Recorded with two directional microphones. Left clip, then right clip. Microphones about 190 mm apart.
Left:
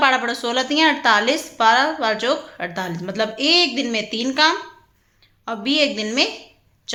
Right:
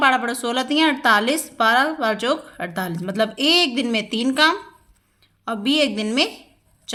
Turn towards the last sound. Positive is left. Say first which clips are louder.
# left 1 dB
turn(degrees=-30)  # may be behind; listen again after turning